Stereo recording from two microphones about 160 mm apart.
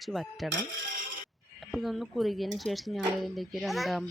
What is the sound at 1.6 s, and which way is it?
Speech, centre (ahead or behind).